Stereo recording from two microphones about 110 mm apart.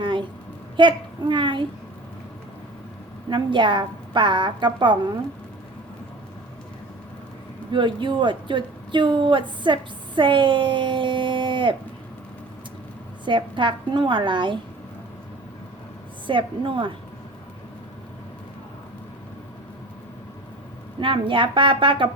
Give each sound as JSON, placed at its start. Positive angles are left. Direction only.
{"t": 0.0, "sound": "a sound", "side_deg": -50}
{"t": 0.8, "sound": "speech", "side_deg": -45}
{"t": 3.2, "sound": "speech", "side_deg": -45}
{"t": 7.7, "sound": "speech", "side_deg": -45}
{"t": 13.2, "sound": "speech", "side_deg": -45}
{"t": 16.2, "sound": "speech", "side_deg": -50}
{"t": 21.0, "sound": "speech", "side_deg": -50}